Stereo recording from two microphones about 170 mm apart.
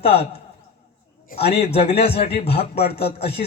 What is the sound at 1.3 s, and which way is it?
Speech, 70° left (ahead or behind).